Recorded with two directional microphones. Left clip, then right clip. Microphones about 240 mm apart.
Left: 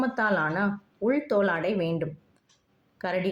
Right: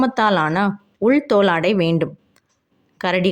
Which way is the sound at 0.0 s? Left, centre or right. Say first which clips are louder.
Right 9 dB; right.